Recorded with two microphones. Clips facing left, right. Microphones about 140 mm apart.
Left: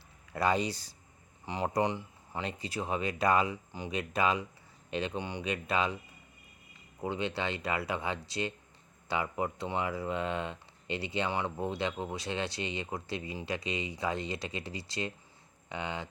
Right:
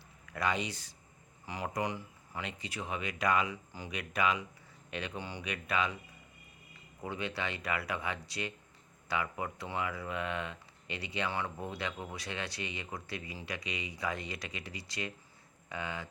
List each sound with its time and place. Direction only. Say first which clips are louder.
0.3 s speech: left 5 dB; 35° left (ahead or behind)
3.7 s speech: left 5 dB; 20° left (ahead or behind)
7.0 s speech: left 4 dB; 25° left (ahead or behind)